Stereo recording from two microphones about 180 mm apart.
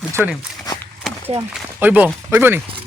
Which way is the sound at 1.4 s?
10° right (ahead or behind).